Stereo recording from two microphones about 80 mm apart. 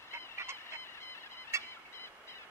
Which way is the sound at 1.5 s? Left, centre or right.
Right.